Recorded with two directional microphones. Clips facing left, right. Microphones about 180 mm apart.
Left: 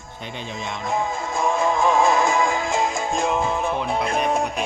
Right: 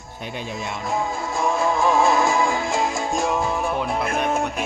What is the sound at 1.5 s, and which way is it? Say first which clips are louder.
Music: even; 20° left (ahead or behind).